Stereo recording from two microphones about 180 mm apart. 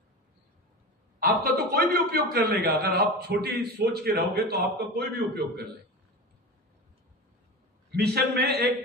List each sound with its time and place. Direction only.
1.2 s a man's voice: 60° right (ahead or behind)
7.9 s a man's voice: 60° right (ahead or behind)